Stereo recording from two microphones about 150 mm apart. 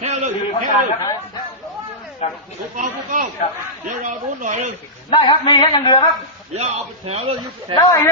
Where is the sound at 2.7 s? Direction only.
60° right (ahead or behind).